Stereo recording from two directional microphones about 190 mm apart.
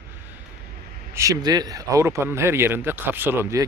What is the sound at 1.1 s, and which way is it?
Speech, 15° right (ahead or behind).